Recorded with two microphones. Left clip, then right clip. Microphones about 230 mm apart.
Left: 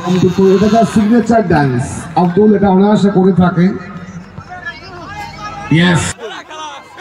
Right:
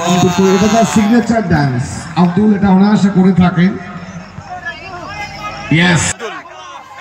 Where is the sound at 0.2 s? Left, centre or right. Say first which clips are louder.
Left 4 dB; centre.